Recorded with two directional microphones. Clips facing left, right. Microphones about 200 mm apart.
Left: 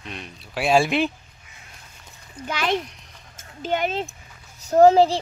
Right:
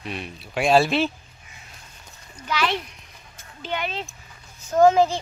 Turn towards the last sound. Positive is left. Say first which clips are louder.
# left 3 dB
turn(degrees=35)  # may be behind; listen again after turning